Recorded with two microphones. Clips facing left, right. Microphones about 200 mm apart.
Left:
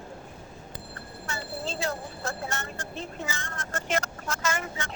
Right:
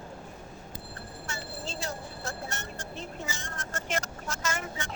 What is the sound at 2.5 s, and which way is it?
Vehicle, 90° left.